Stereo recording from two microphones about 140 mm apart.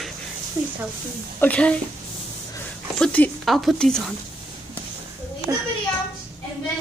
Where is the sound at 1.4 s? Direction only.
10° left (ahead or behind).